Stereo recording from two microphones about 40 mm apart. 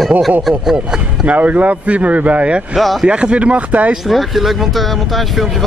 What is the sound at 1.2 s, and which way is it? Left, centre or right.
Speech, right.